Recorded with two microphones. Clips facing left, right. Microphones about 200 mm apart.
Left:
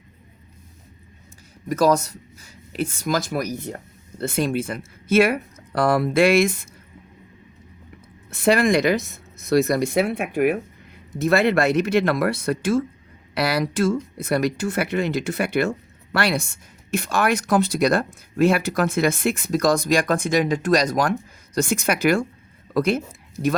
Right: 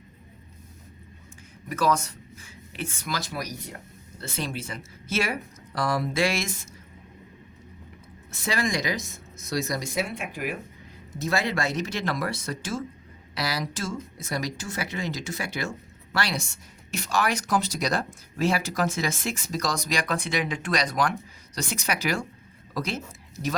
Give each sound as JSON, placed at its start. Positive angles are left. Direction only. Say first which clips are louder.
{"t": 1.7, "sound": "speech", "louder": "left 6 dB", "side_deg": 40}
{"t": 8.3, "sound": "speech", "louder": "left 10 dB", "side_deg": 60}